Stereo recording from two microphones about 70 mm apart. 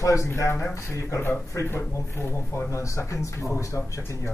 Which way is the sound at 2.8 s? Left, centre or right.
Left.